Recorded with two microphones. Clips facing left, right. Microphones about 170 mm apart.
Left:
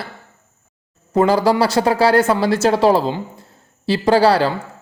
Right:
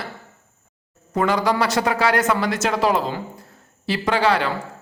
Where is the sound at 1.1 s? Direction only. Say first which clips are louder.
Left 5 dB; 30° left (ahead or behind).